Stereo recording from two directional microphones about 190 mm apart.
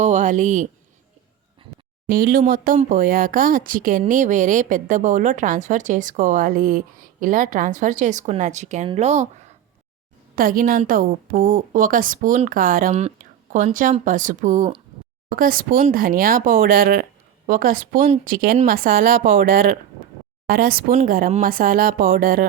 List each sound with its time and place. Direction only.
0.0 s speech: 40° right (ahead or behind)
2.0 s a woman's voice: 50° right (ahead or behind)
10.3 s a woman's voice: 50° right (ahead or behind)